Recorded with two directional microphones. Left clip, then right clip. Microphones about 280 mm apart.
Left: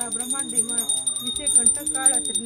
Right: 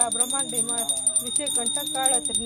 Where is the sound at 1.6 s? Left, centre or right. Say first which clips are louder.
Even; centre.